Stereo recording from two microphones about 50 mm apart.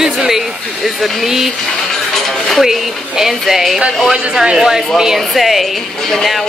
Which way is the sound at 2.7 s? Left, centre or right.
Centre.